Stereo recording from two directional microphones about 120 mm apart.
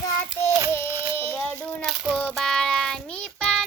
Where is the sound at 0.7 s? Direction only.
20° left (ahead or behind).